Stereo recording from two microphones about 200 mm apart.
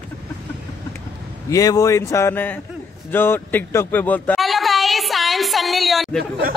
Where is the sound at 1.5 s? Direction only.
15° left (ahead or behind).